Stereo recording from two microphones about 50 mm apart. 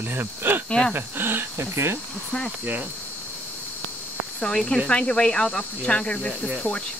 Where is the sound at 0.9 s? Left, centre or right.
Right.